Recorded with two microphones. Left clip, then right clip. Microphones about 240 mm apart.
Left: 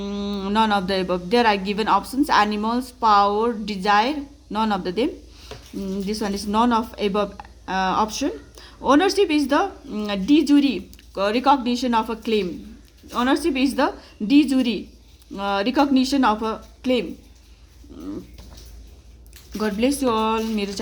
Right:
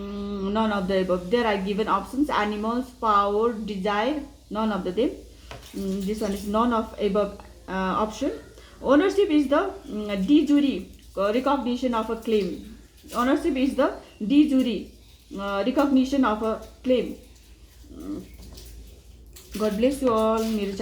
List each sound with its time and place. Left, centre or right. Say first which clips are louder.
0.0 s speech: left 3 dB; left
6.1 s speech: left 2 dB; left
17.9 s pigeon: left 2 dB; left
19.5 s speech: left 1 dB; left